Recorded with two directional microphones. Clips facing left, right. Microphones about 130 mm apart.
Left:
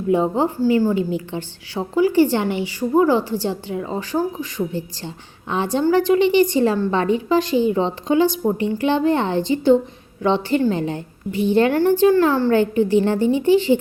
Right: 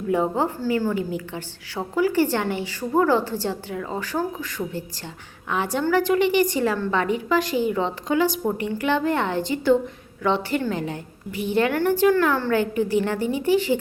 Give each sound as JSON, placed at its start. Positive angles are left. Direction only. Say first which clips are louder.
{"t": 0.1, "sound": "a woman's voice", "louder": "left 4 dB", "side_deg": 20}